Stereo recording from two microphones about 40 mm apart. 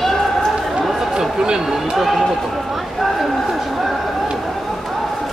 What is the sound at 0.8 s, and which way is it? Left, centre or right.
Chatter, centre.